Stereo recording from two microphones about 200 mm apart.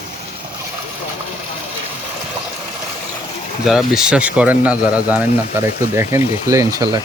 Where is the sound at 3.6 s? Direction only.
5° right (ahead or behind).